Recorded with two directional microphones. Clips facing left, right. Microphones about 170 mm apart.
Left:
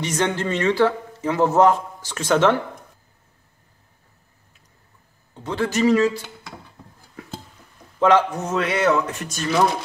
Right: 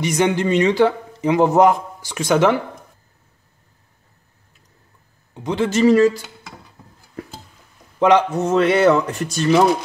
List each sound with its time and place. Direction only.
0.0 s a man's voice: 10° right (ahead or behind)
5.3 s speech: 15° right (ahead or behind); by 6.2 s 40° right (ahead or behind)
8.0 s a man's voice: 15° right (ahead or behind)
8.5 s speech: 30° right (ahead or behind)